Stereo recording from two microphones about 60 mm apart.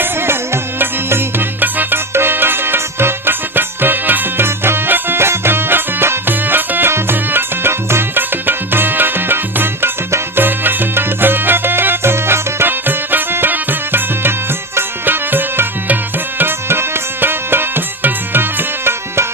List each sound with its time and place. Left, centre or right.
0.0 s music: right
16.4 s tabla: right